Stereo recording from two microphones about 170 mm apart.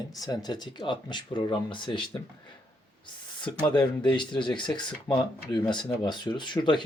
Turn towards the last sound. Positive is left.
turn(degrees=25)  # may be behind; listen again after turning